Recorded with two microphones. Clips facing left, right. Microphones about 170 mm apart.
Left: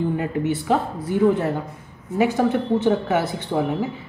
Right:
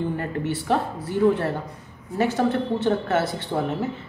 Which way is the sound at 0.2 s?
10° left (ahead or behind).